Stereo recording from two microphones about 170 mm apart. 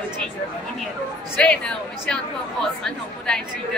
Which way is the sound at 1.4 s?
5° left (ahead or behind).